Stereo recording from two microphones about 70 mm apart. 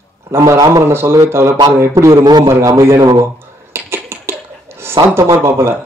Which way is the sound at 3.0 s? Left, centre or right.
Right.